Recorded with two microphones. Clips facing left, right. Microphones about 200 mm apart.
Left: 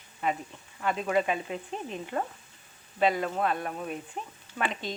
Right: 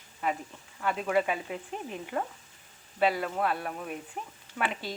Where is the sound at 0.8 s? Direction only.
5° right (ahead or behind).